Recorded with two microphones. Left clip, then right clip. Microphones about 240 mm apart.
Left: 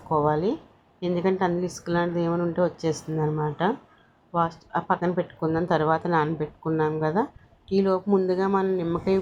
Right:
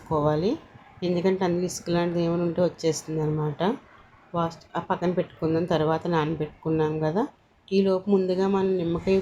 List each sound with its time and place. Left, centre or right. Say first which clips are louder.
0.1 s a woman's voice: left 1 dB; centre